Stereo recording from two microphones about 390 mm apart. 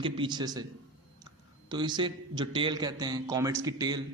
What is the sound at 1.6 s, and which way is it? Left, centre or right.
A man's voice, centre.